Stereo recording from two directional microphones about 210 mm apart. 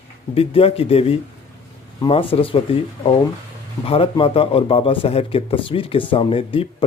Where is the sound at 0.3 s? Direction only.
25° left (ahead or behind).